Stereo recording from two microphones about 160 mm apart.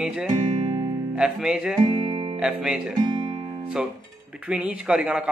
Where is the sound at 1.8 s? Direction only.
30° right (ahead or behind).